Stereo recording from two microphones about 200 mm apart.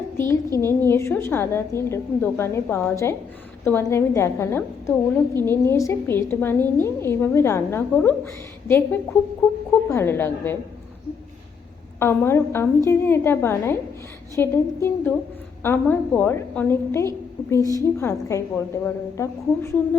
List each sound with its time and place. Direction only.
0.6 s a woman's voice: 10° left (ahead or behind)
11.9 s a woman's voice: 10° left (ahead or behind)
17.6 s a woman's voice: 15° right (ahead or behind)
17.9 s a woman's voice: 15° left (ahead or behind)